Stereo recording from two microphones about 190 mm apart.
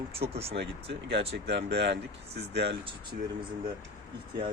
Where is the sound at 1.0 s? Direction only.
65° right (ahead or behind).